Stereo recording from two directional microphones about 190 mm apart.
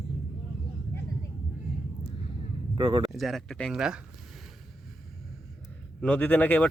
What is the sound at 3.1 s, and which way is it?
Speech, centre (ahead or behind).